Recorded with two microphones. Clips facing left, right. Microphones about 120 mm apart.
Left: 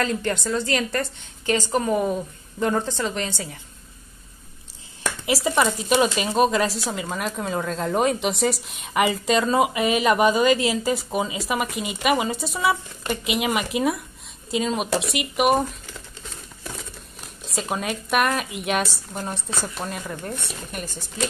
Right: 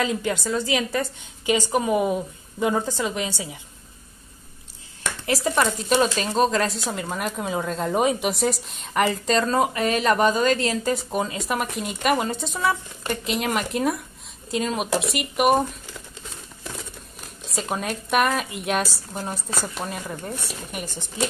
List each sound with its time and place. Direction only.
0.0 s a woman's voice: 5° right (ahead or behind)
5.2 s a woman's voice: 10° left (ahead or behind)
17.5 s a woman's voice: centre (ahead or behind)
20.8 s a woman's voice: 15° right (ahead or behind)